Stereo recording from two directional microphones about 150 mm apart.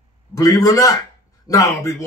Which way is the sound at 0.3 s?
25° left (ahead or behind).